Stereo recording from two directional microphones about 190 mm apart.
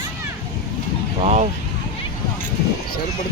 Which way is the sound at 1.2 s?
35° right (ahead or behind).